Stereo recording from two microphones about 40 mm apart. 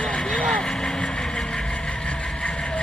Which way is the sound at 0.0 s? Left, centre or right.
Centre.